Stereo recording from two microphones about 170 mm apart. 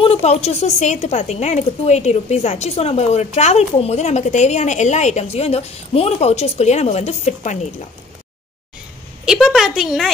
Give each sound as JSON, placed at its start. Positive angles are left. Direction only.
{"t": 0.0, "sound": "a woman's voice", "side_deg": 35}
{"t": 9.2, "sound": "a woman's voice", "side_deg": -5}